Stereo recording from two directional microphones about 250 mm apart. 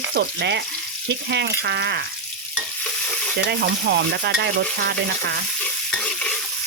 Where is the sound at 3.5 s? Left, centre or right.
Right.